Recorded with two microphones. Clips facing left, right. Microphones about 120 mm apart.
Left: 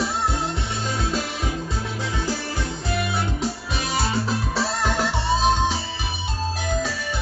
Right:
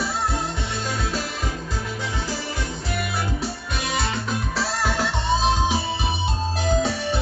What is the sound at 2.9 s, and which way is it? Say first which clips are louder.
Music: left 2 dB; centre (ahead or behind).